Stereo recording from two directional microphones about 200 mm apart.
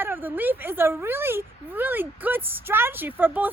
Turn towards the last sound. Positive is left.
turn(degrees=-10)  # may be behind; listen again after turning